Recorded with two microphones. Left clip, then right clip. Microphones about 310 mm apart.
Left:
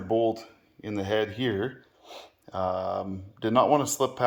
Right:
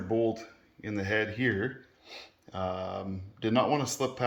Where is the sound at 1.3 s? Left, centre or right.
Left.